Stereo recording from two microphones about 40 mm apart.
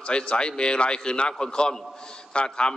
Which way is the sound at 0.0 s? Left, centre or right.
Left.